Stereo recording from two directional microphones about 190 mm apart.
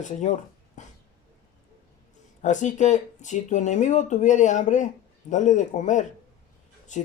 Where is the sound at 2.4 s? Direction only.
40° left (ahead or behind).